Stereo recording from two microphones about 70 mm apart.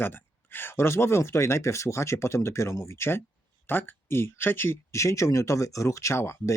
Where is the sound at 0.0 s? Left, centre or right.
Left.